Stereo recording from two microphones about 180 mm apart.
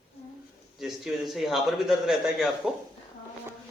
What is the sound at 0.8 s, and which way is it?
A man's voice, centre (ahead or behind).